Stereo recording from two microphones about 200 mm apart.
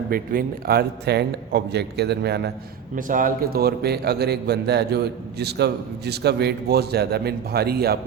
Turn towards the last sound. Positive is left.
turn(degrees=-50)  # may be behind; listen again after turning